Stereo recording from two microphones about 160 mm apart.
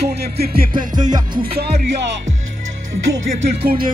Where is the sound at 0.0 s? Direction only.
90° right; by 0.7 s 75° right (ahead or behind).